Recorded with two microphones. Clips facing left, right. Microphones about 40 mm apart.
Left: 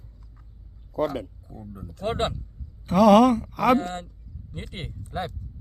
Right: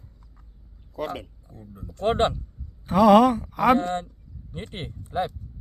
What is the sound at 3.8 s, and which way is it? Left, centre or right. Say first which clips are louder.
Speech: right 4 dB; right.